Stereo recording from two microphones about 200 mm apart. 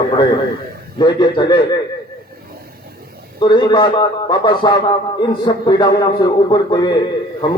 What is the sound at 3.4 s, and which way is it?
A man's voice, 25° left (ahead or behind).